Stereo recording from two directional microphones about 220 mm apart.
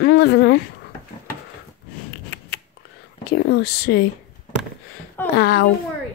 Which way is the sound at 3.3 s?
50° left (ahead or behind).